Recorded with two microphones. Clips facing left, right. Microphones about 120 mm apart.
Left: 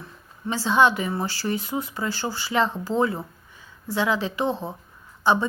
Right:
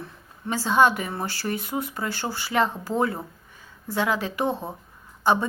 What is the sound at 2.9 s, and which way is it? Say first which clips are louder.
Speech: left 3 dB; 10° right (ahead or behind).